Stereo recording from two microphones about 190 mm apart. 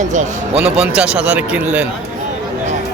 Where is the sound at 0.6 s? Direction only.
5° right (ahead or behind).